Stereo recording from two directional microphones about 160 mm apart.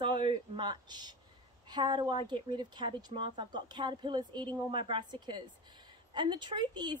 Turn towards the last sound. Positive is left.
turn(degrees=-25)  # may be behind; listen again after turning